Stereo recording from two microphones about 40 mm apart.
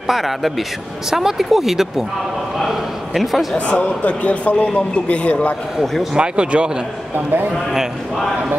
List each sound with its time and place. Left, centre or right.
0.0 s speech: centre
2.6 s a sound: centre
3.5 s a man's voice: left
6.1 s speech: right